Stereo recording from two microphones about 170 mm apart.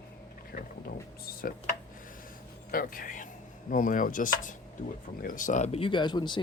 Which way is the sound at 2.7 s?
55° left (ahead or behind).